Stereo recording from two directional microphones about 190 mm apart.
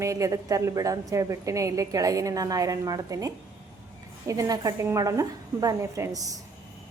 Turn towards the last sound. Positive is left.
turn(degrees=-15)  # may be behind; listen again after turning